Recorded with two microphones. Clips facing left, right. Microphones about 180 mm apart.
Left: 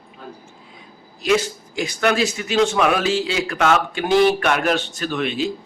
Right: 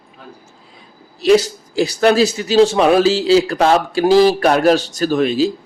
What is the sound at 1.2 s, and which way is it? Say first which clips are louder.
A man's voice: right 7 dB; 35° right (ahead or behind).